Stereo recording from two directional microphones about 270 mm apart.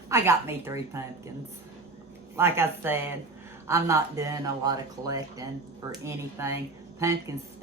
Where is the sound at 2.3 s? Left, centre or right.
Centre.